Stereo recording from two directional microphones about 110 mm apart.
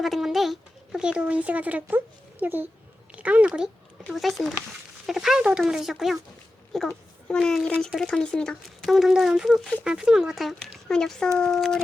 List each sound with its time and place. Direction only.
0.0 s a sound: centre (ahead or behind)
2.4 s speech: 15° right (ahead or behind)
4.0 s a child's voice: centre (ahead or behind)